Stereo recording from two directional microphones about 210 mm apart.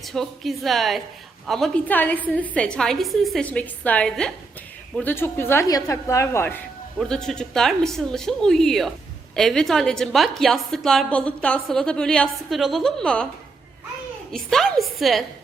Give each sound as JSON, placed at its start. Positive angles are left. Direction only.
{"t": 0.0, "sound": "a woman's voice", "side_deg": 0}
{"t": 14.3, "sound": "a woman's voice", "side_deg": 0}